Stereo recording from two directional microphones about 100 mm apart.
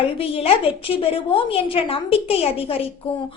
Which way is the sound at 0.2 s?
70° left (ahead or behind).